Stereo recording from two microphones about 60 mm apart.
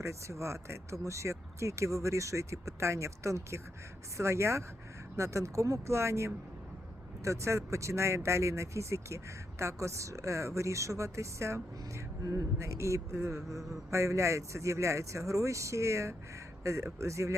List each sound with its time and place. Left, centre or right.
0.0 s speech: right
12.2 s speech: right
12.5 s speech: right